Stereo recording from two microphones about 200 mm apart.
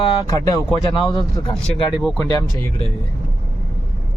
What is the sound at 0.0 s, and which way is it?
Speech, 20° left (ahead or behind).